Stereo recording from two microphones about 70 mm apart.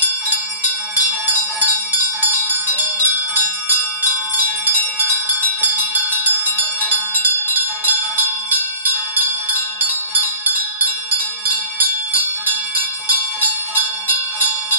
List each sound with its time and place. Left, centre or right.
2.4 s music: right
6.9 s bell: right
10.1 s music: right